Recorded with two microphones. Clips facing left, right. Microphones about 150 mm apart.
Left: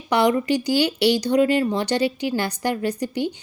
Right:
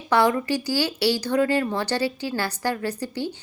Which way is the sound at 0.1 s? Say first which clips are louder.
Left 2 dB; 20° left (ahead or behind).